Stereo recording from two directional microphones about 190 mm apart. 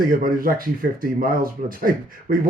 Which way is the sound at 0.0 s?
50° right (ahead or behind).